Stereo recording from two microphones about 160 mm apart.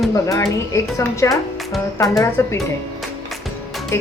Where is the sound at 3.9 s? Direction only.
15° left (ahead or behind).